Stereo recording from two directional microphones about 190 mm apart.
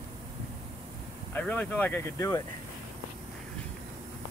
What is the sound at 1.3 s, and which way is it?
Speech, 10° left (ahead or behind).